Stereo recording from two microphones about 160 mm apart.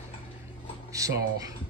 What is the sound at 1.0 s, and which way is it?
Speech, 20° right (ahead or behind).